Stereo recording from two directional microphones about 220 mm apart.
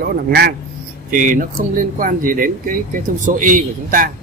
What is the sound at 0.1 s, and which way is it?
Speech, 45° right (ahead or behind).